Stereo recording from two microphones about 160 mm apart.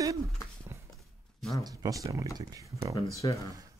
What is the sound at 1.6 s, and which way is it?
Speech, 20° right (ahead or behind).